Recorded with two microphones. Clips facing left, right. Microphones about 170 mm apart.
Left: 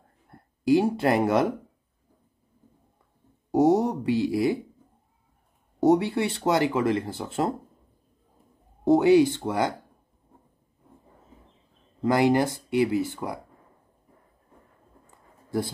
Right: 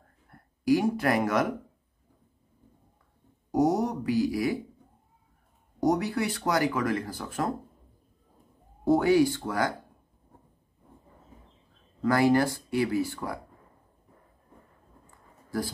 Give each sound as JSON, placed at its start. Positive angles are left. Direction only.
{"t": 0.3, "sound": "speech", "side_deg": 25}
{"t": 3.5, "sound": "speech", "side_deg": 30}
{"t": 5.8, "sound": "speech", "side_deg": 25}
{"t": 8.8, "sound": "speech", "side_deg": 20}
{"t": 12.0, "sound": "speech", "side_deg": 20}